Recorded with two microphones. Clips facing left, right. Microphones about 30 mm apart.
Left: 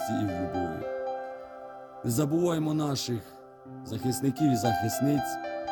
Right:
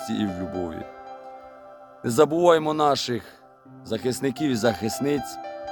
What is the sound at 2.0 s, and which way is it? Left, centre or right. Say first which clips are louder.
Speech: right 9 dB; right.